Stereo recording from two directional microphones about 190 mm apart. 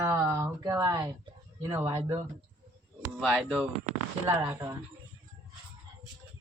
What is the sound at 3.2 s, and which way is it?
Speech, 5° right (ahead or behind).